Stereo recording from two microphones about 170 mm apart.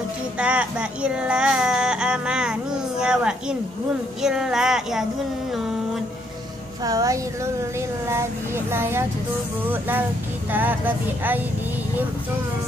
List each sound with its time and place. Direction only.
0.4 s speech: 5° right (ahead or behind)
6.8 s speech: 20° right (ahead or behind)
8.7 s speech: 15° right (ahead or behind)